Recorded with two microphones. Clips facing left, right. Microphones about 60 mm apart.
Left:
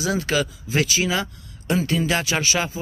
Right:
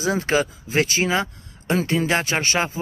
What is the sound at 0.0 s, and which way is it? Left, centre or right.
Speech, right.